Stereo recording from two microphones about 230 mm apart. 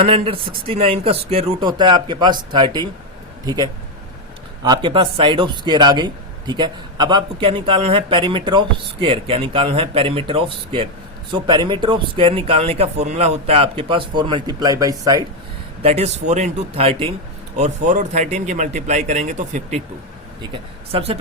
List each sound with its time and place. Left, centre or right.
0.0 s a man's voice: right
15.8 s a man's voice: right
20.9 s a man's voice: right